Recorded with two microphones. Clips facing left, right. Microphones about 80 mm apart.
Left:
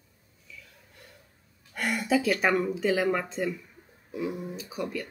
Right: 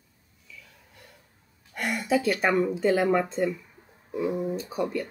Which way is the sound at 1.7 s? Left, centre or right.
Centre.